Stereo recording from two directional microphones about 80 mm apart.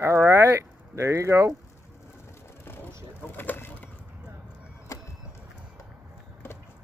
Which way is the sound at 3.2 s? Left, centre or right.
Left.